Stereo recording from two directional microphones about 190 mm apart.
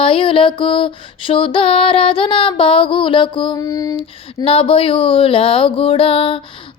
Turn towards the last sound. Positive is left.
turn(degrees=25)  # may be behind; listen again after turning